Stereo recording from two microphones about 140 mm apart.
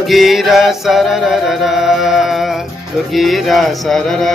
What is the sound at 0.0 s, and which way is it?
Music, centre (ahead or behind).